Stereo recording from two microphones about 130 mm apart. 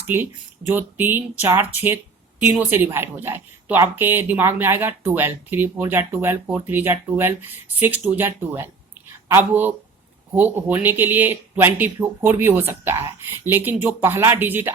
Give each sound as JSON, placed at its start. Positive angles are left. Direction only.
{"t": 0.1, "sound": "a woman's voice", "side_deg": -15}